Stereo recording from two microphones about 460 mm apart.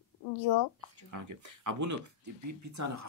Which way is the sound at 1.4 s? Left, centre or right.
Right.